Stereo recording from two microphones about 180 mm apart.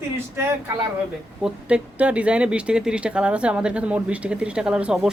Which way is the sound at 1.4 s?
5° right (ahead or behind).